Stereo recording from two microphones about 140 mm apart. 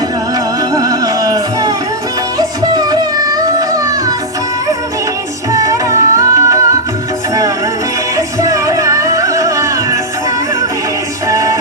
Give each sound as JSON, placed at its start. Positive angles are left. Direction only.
{"t": 0.7, "sound": "music", "side_deg": -25}
{"t": 2.7, "sound": "music", "side_deg": -30}
{"t": 5.5, "sound": "music", "side_deg": -25}
{"t": 8.1, "sound": "music", "side_deg": -20}
{"t": 11.3, "sound": "music", "side_deg": -25}